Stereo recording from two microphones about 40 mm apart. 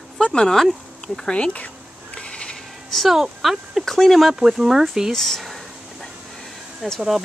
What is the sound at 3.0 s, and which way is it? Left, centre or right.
Speech, centre.